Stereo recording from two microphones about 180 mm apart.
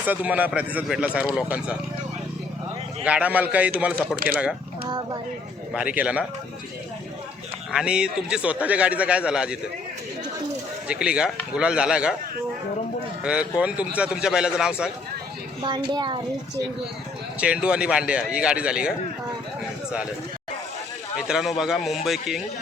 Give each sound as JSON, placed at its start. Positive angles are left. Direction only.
{"t": 0.1, "sound": "speech", "side_deg": -10}
{"t": 3.0, "sound": "speech", "side_deg": -5}
{"t": 4.9, "sound": "a woman's voice", "side_deg": -20}
{"t": 5.7, "sound": "speech", "side_deg": -5}
{"t": 7.7, "sound": "a man's voice", "side_deg": -5}
{"t": 10.8, "sound": "a man's voice", "side_deg": -5}
{"t": 13.2, "sound": "a man's voice", "side_deg": -5}
{"t": 15.6, "sound": "a woman's voice", "side_deg": -25}
{"t": 17.4, "sound": "a man's voice", "side_deg": -5}
{"t": 21.2, "sound": "a man's voice", "side_deg": -5}